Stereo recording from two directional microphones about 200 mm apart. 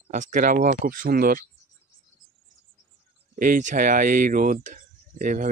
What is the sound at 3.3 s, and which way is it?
Speech, 45° right (ahead or behind).